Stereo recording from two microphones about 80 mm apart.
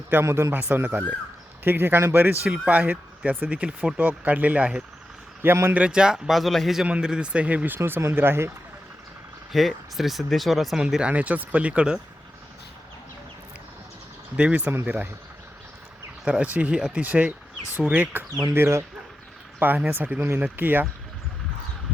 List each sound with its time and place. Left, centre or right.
0.1 s speech: right; by 6.8 s centre
6.8 s speech: centre
7.8 s speech: right
9.5 s speech: centre
10.8 s speech: centre
14.3 s speech: centre
16.2 s speech: centre